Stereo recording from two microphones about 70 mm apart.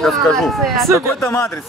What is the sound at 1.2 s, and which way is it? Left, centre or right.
Speech, left.